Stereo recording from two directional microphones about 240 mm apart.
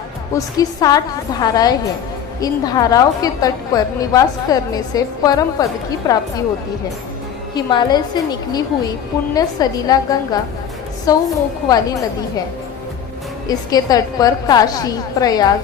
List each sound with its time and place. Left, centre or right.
0.3 s a woman's voice: centre
7.5 s a woman's voice: centre
13.5 s a woman's voice: centre